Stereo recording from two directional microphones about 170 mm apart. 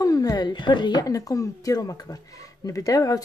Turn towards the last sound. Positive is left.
turn(degrees=20)  # may be behind; listen again after turning